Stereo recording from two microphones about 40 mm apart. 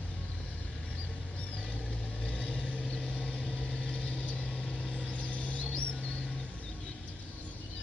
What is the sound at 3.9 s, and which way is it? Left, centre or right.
Vehicle, centre.